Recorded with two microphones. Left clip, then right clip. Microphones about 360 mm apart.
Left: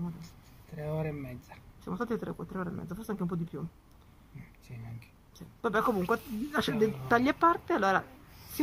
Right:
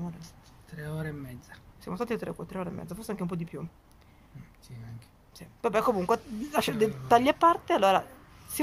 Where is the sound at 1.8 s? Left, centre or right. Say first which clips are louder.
Right 2 dB; centre.